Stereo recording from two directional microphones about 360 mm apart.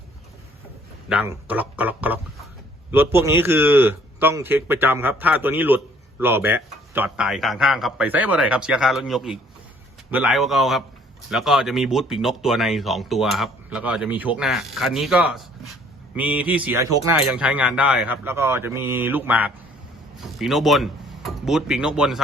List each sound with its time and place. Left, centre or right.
1.1 s a man's voice: centre